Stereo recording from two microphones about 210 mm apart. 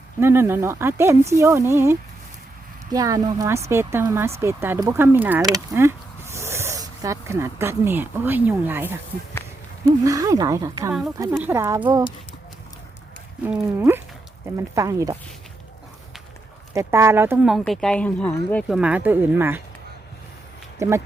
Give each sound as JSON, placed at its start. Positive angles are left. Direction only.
{"t": 0.2, "sound": "speech", "side_deg": -10}
{"t": 13.4, "sound": "speech", "side_deg": -10}
{"t": 16.7, "sound": "speech", "side_deg": -10}
{"t": 20.7, "sound": "speech", "side_deg": -15}